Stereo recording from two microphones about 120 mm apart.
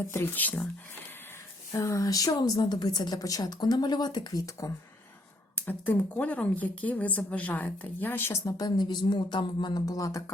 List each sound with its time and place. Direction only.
0.1 s speech: 20° left (ahead or behind)
1.7 s speech: 25° left (ahead or behind)
5.5 s speech: 15° left (ahead or behind)